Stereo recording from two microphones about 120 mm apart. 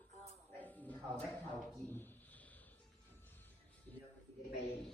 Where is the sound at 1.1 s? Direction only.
10° left (ahead or behind).